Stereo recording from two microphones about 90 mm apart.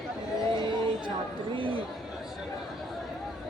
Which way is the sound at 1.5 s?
70° right (ahead or behind).